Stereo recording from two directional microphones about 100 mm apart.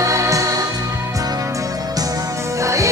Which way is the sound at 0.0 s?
30° right (ahead or behind).